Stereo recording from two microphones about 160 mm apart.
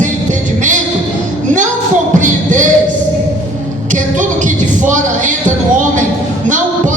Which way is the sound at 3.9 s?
50° right (ahead or behind).